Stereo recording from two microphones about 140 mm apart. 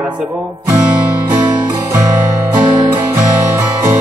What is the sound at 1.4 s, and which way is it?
Music, 30° right (ahead or behind).